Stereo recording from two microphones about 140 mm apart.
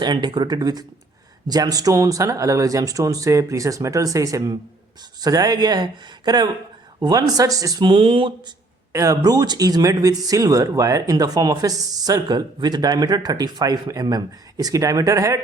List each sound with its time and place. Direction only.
0.0 s speech: 30° right (ahead or behind)
8.9 s speech: 20° right (ahead or behind)